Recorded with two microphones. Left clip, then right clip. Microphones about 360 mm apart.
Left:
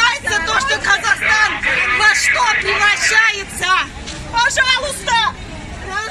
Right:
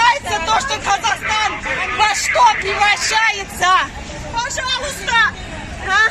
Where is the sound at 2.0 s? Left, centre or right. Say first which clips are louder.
Right 3 dB; centre.